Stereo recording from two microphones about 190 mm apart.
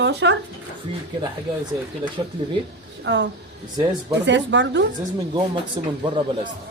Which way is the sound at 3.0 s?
70° right (ahead or behind).